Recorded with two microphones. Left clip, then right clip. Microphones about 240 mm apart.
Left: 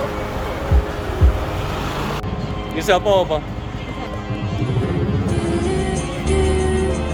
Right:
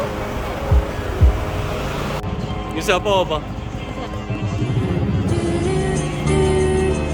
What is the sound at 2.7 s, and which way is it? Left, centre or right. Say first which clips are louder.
Speech: left 2 dB; centre.